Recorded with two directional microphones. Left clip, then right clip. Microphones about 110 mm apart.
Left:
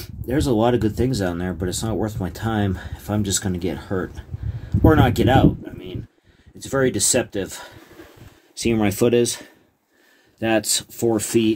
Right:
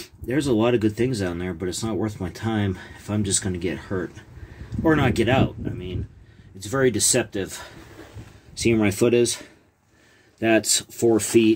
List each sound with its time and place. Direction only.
0.3 s speech: 20° left (ahead or behind)
8.8 s speech: 45° left (ahead or behind)
10.4 s speech: 25° left (ahead or behind)